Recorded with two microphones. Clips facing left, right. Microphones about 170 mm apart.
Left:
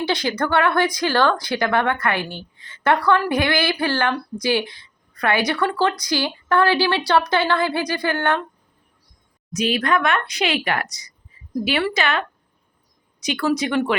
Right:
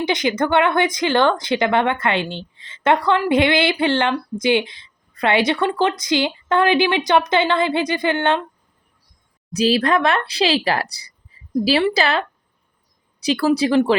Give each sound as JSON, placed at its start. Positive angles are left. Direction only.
{"t": 0.0, "sound": "a woman's voice", "side_deg": -20}
{"t": 9.5, "sound": "speech", "side_deg": -35}